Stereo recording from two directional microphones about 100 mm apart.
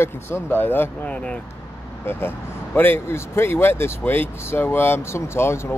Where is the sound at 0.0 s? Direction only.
25° left (ahead or behind).